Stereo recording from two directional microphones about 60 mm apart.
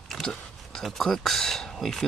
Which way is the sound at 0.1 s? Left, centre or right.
Centre.